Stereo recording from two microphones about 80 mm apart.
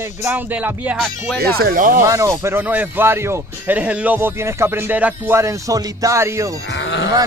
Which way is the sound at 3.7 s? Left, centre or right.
Centre.